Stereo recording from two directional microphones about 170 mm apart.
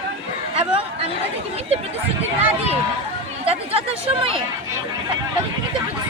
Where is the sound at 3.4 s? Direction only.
35° right (ahead or behind).